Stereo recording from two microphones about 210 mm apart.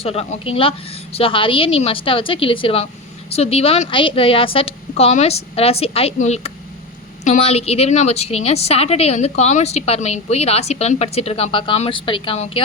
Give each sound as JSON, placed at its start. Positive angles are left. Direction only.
{"t": 0.0, "sound": "a woman's voice", "side_deg": 30}